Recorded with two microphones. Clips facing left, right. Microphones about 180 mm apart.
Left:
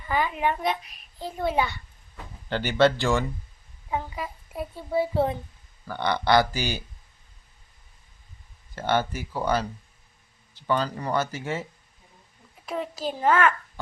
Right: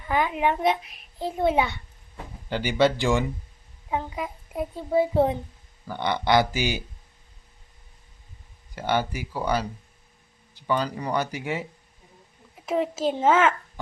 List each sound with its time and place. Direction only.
0.1 s a child's voice: 15° right (ahead or behind)
1.5 s a child's voice: centre (ahead or behind)
2.5 s a child's voice: 10° right (ahead or behind)
8.7 s a child's voice: 15° right (ahead or behind)
12.6 s a child's voice: 20° right (ahead or behind)